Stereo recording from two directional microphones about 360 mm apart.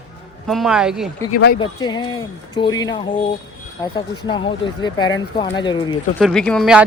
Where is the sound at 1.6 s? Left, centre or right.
Centre.